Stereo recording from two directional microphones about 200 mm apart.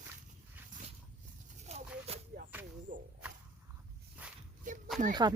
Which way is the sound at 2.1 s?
30° right (ahead or behind).